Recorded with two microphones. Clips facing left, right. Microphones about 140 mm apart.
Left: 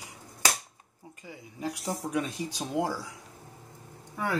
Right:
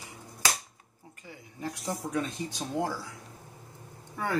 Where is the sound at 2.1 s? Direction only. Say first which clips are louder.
Left 1 dB; 15° left (ahead or behind).